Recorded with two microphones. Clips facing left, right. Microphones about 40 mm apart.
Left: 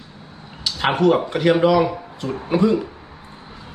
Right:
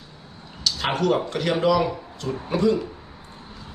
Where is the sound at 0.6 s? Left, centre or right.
Centre.